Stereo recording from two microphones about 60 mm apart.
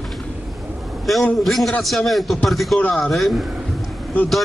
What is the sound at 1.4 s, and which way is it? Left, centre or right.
A man's voice, centre.